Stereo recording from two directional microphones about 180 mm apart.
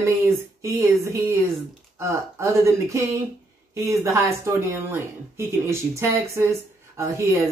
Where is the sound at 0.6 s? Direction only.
15° right (ahead or behind).